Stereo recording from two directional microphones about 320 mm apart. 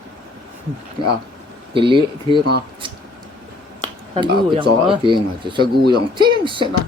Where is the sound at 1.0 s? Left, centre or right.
Centre.